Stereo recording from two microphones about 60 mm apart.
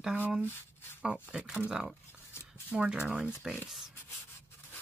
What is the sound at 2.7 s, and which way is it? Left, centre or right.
Speech, centre.